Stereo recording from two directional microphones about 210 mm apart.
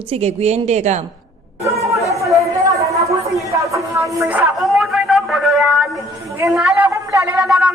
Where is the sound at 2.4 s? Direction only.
15° right (ahead or behind).